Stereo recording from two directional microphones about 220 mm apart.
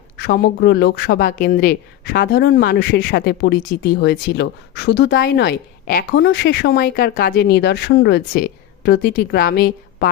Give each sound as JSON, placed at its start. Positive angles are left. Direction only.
{"t": 0.2, "sound": "speech", "side_deg": 45}